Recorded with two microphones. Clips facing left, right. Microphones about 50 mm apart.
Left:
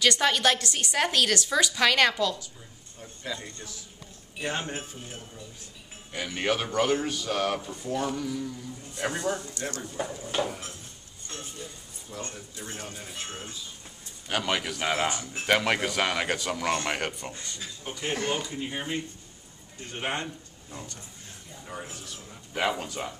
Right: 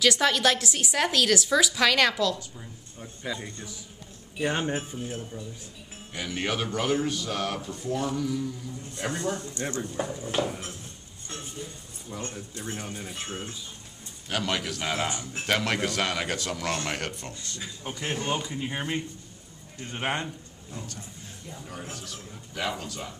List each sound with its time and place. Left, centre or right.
0.0 s a woman's voice: centre
3.0 s a woman's voice: centre
8.9 s a man's voice: centre
9.4 s speech: right
9.9 s a woman's voice: centre
12.1 s speech: centre
14.3 s a man's voice: centre
18.1 s speech: left
18.4 s speech: centre
20.7 s a man's voice: centre
22.0 s speech: left